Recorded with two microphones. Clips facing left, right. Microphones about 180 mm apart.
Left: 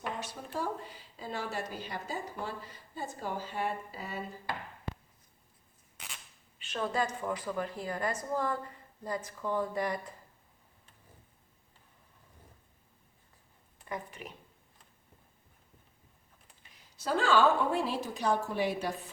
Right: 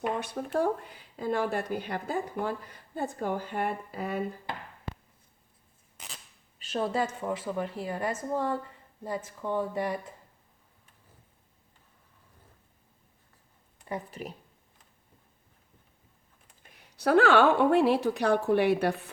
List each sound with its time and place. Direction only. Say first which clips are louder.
0.2 s speech: right 8 dB; 60° right (ahead or behind)
6.6 s a woman's voice: right 3 dB; 35° right (ahead or behind)
7.9 s speech: right 2 dB; 10° right (ahead or behind)
13.8 s speech: right 4 dB; 35° right (ahead or behind)
16.6 s speech: right 8 dB; 65° right (ahead or behind)